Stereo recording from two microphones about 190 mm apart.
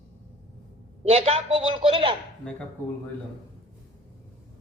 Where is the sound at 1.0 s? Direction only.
30° right (ahead or behind).